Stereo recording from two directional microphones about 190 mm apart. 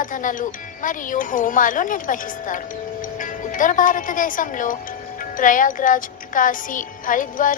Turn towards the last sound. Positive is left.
turn(degrees=45)  # may be behind; listen again after turning